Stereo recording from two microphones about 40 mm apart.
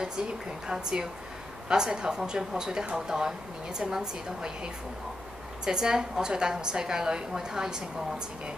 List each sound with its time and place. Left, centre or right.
0.7 s a woman's voice: centre
5.7 s a woman's voice: centre